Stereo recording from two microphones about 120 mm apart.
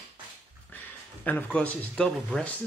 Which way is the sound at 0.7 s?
15° left (ahead or behind).